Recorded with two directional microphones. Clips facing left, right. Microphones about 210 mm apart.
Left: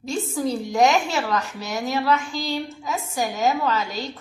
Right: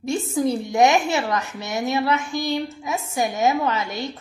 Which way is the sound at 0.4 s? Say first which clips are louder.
Right 2 dB; 20° right (ahead or behind).